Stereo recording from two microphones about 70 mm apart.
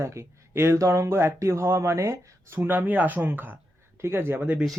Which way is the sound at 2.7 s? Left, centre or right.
Right.